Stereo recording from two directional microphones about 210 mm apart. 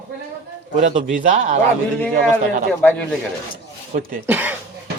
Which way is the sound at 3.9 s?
35° right (ahead or behind).